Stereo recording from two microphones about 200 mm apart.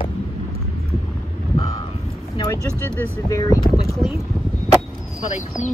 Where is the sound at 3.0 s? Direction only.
15° left (ahead or behind).